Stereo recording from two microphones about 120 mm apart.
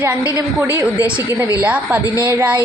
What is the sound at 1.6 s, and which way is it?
Speech, 10° right (ahead or behind).